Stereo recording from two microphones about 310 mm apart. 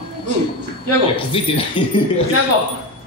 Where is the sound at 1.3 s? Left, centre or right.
Centre.